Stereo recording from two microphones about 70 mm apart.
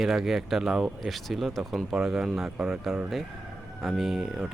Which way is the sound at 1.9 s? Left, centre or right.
Centre.